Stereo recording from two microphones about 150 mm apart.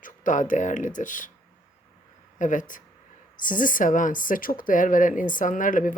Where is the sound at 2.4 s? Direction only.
60° left (ahead or behind).